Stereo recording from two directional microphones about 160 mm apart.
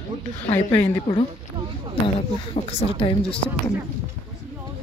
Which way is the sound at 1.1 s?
30° left (ahead or behind).